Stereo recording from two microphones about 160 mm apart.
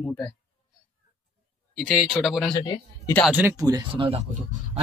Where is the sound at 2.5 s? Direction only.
30° left (ahead or behind).